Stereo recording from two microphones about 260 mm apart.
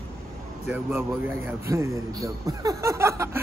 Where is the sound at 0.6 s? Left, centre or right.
Centre.